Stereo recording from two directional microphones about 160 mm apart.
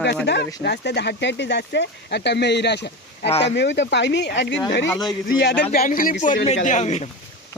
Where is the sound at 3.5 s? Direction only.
90° left.